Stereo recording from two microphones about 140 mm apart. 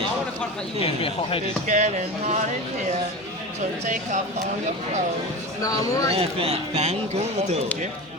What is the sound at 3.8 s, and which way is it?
Speech, 60° right (ahead or behind).